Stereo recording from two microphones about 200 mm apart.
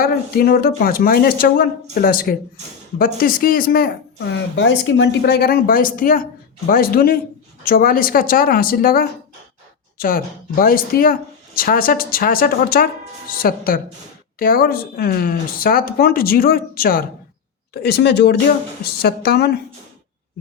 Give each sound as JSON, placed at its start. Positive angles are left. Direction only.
{"t": 0.0, "sound": "speech", "side_deg": 50}